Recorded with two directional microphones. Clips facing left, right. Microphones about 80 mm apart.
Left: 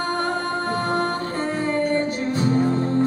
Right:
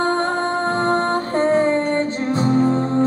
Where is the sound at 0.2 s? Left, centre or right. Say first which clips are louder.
Right 4 dB; right.